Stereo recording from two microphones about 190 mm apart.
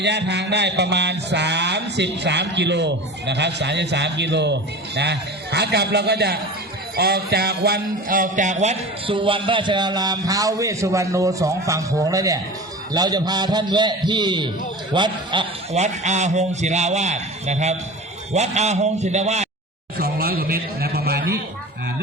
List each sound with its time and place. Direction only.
0.0 s mantra: 65° right (ahead or behind)
6.9 s speech: 55° right (ahead or behind); by 15.8 s 25° right (ahead or behind)
15.8 s a man's voice: 40° right (ahead or behind)
20.0 s a sound: 55° right (ahead or behind)